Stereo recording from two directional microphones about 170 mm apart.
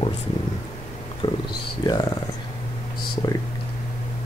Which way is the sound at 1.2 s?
30° left (ahead or behind).